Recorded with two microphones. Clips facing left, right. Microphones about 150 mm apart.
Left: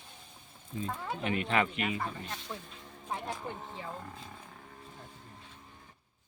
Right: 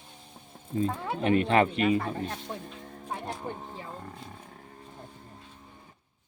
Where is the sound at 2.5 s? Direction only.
35° right (ahead or behind).